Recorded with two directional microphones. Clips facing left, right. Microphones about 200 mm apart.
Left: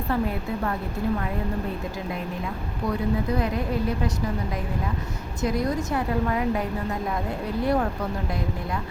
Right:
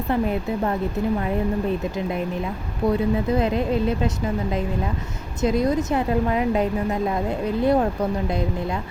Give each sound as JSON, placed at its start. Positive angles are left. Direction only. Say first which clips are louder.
{"t": 0.1, "sound": "speech", "louder": "right 4 dB", "side_deg": -20}
{"t": 2.8, "sound": "speech", "louder": "right 5 dB", "side_deg": -25}
{"t": 5.4, "sound": "speech", "louder": "right 5 dB", "side_deg": -20}